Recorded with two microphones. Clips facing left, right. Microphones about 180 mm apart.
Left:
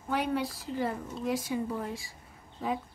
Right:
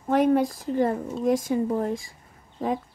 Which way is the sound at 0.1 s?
45° right (ahead or behind).